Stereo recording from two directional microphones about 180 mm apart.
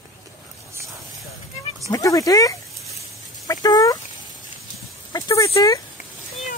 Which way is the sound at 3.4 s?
20° left (ahead or behind).